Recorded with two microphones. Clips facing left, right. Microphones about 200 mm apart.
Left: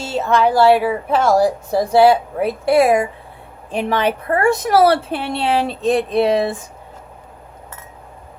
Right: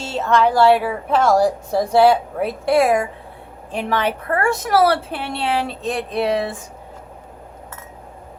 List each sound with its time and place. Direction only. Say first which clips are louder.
0.0 s a woman's voice: left 1 dB; 5° left (ahead or behind)
3.7 s a woman's voice: left 3 dB; 20° left (ahead or behind)